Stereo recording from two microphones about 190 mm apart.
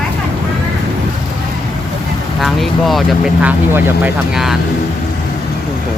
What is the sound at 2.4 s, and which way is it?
Speech, centre (ahead or behind).